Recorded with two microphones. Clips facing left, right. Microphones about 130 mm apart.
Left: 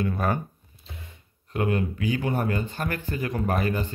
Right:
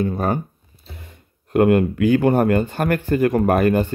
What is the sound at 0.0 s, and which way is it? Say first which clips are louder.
Speech: right 5 dB; 30° right (ahead or behind).